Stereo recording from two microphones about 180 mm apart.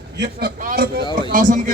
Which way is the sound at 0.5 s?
50° right (ahead or behind).